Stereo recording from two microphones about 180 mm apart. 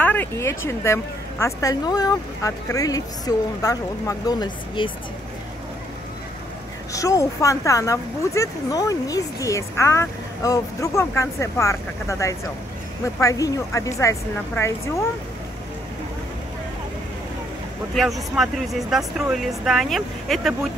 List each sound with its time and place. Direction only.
0.0 s a woman's voice: 10° left (ahead or behind); by 4.9 s 25° left (ahead or behind)
6.9 s speech: 20° left (ahead or behind)
17.9 s speech: centre (ahead or behind)